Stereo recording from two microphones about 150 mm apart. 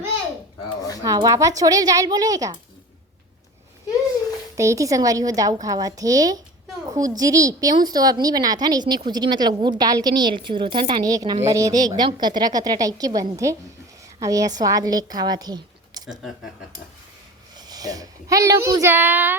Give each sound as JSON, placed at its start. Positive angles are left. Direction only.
{"t": 1.0, "sound": "a woman's voice", "side_deg": -25}
{"t": 4.5, "sound": "a woman's voice", "side_deg": -20}
{"t": 17.6, "sound": "a woman's voice", "side_deg": -25}